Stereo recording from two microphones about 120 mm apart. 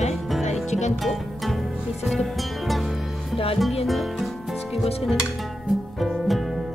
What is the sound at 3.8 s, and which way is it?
Music, centre (ahead or behind).